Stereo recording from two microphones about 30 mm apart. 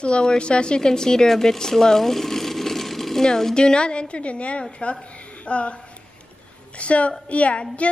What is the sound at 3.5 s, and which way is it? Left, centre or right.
A woman's voice, left.